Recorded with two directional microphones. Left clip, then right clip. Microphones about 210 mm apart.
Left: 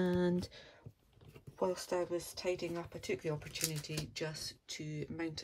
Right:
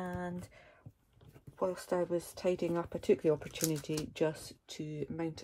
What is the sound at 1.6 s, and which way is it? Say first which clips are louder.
Speech: right 2 dB; centre (ahead or behind).